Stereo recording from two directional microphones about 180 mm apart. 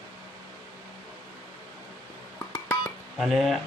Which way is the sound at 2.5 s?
20° left (ahead or behind).